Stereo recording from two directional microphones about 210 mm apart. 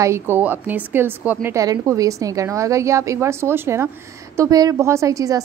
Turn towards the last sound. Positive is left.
turn(degrees=-15)  # may be behind; listen again after turning